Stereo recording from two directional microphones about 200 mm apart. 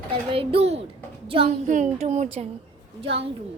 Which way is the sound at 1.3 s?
30° right (ahead or behind).